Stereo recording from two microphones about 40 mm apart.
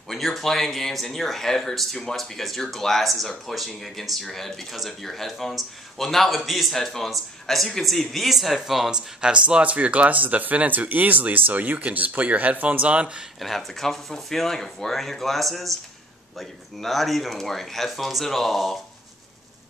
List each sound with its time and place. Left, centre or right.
0.1 s speech: centre
6.7 s speech: centre
8.9 s speech: right
9.6 s speech: right
13.4 s speech: centre